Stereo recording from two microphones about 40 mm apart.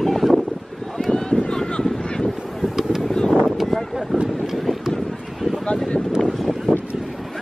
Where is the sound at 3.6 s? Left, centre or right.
Centre.